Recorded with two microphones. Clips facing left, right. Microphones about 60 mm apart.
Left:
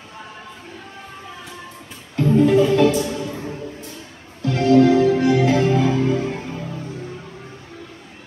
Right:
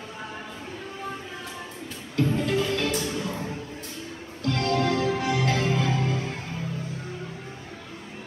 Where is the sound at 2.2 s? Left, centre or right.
Centre.